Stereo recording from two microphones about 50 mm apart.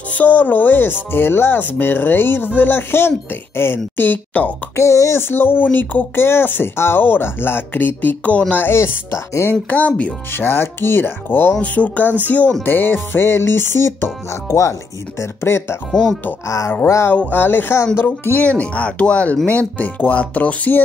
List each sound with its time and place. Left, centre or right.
0.1 s speech: left
4.7 s speech: left
5.3 s speech: left
6.1 s speech: left
8.6 s music: left
9.7 s speech: left
10.3 s speech: left
11.6 s speech: left
12.6 s music: left
15.9 s speech: centre
16.4 s speech: left
16.8 s speech: left
17.3 s speech: left
18.4 s speech: left